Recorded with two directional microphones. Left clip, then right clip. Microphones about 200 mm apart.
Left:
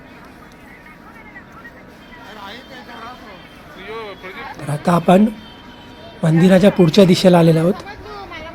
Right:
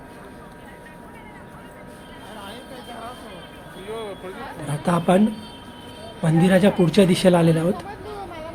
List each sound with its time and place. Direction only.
3.8 s speech: 40° right (ahead or behind)
4.7 s speech: 25° left (ahead or behind)
6.2 s speech: 25° left (ahead or behind)